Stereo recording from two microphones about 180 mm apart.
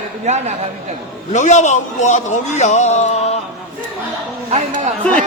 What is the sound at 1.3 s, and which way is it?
A man's voice, 40° left (ahead or behind).